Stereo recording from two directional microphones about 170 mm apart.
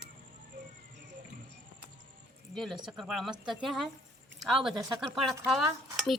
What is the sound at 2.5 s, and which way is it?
Speech, centre (ahead or behind).